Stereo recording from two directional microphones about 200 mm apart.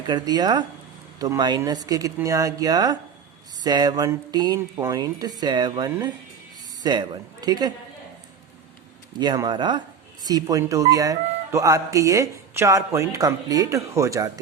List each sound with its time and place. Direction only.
0.1 s speech: 20° right (ahead or behind)
9.1 s speech: 20° right (ahead or behind)